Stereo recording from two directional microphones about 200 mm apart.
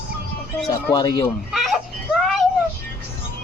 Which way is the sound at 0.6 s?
20° left (ahead or behind).